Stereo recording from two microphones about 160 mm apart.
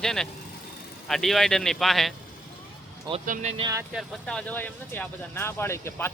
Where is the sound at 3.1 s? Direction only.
25° right (ahead or behind).